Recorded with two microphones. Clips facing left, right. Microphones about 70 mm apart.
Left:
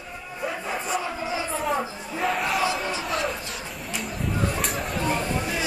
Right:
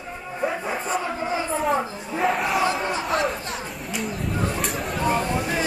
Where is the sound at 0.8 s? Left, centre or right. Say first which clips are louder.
Right 2 dB; right.